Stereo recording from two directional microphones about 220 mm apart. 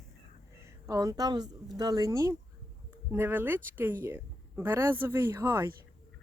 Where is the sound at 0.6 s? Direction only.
15° right (ahead or behind).